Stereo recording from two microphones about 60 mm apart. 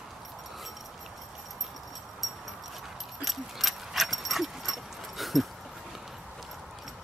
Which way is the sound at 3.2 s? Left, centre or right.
Centre.